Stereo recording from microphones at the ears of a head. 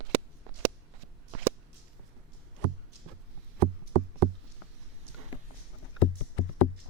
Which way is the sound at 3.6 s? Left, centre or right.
Right.